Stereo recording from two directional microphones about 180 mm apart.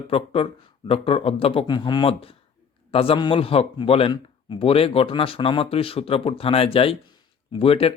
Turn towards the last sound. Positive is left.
turn(degrees=30)  # may be behind; listen again after turning